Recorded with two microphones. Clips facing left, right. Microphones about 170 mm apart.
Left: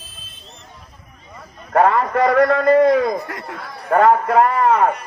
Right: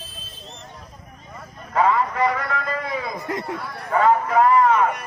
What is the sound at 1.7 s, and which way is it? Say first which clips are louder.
A man's voice: left 5 dB; 60° left (ahead or behind).